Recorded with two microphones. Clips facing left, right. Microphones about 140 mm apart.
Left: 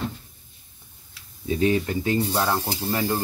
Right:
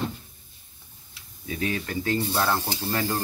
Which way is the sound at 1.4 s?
25° left (ahead or behind).